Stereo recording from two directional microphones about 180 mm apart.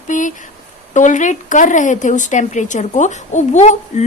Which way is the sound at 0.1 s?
45° left (ahead or behind).